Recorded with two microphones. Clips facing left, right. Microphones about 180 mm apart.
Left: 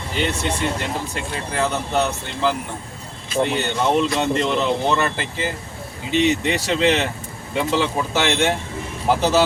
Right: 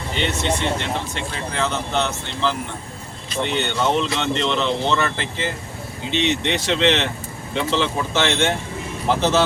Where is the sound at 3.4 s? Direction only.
5° left (ahead or behind).